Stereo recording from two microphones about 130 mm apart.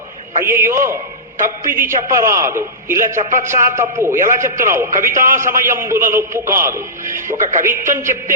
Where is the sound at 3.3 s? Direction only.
75° right (ahead or behind).